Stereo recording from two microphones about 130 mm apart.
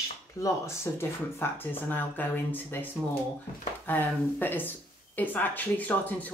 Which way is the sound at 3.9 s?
15° left (ahead or behind).